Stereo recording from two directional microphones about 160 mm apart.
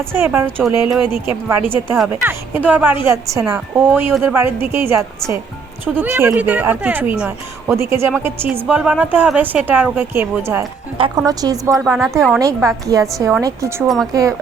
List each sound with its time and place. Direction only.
0.0 s speech: 15° right (ahead or behind)
0.6 s speech: centre (ahead or behind)
1.3 s a woman's voice: 15° right (ahead or behind)
10.9 s speech: 35° right (ahead or behind)
11.3 s a woman's voice: 20° right (ahead or behind)
13.8 s speech: centre (ahead or behind)
14.1 s a woman's voice: 20° right (ahead or behind)